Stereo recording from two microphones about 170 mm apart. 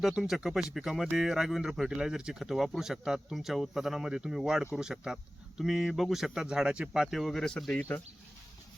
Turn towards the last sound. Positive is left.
turn(degrees=10)  # may be behind; listen again after turning